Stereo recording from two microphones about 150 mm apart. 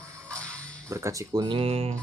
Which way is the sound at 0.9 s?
20° right (ahead or behind).